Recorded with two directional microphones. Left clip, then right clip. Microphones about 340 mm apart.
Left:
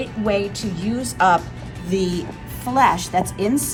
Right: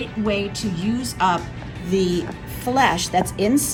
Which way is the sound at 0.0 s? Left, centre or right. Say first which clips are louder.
Left 2 dB; centre.